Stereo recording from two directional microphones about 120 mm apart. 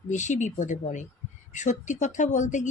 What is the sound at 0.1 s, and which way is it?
Speech, 90° left.